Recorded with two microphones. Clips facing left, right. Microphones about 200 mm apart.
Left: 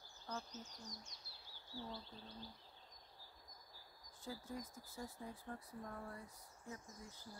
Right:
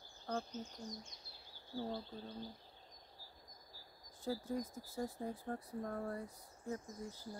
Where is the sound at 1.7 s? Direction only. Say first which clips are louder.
Right 8 dB; 50° right (ahead or behind).